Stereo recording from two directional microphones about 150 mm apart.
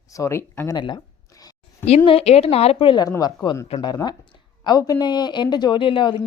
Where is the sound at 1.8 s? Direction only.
40° left (ahead or behind).